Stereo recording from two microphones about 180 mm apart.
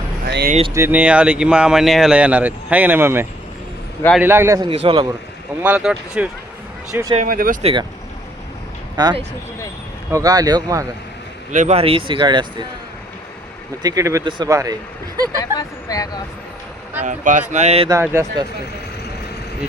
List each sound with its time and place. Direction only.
0.3 s speech: 65° right (ahead or behind)
0.7 s speech: 10° right (ahead or behind)
4.7 s speech: 30° right (ahead or behind)
5.6 s speech: 5° right (ahead or behind)
7.3 s speech: 50° right (ahead or behind)
7.6 s speech: 30° right (ahead or behind)
9.0 s speech: 25° right (ahead or behind)
11.5 s speech: 40° right (ahead or behind)
13.8 s speech: 20° right (ahead or behind)
15.5 s speech: 20° left (ahead or behind)
17.0 s speech: 45° right (ahead or behind)
18.0 s speech: 15° right (ahead or behind)